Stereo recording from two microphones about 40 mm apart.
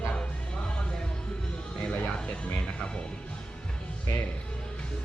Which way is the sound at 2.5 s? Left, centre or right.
Left.